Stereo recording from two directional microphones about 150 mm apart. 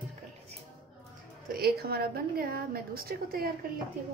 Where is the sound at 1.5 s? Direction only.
90° right.